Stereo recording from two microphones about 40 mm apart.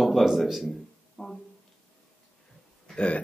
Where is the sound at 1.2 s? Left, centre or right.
Centre.